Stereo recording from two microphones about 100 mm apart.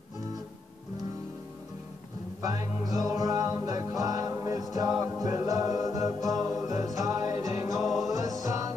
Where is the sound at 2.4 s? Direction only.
40° right (ahead or behind).